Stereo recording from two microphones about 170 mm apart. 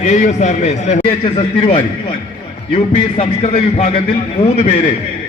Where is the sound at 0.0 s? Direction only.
45° left (ahead or behind).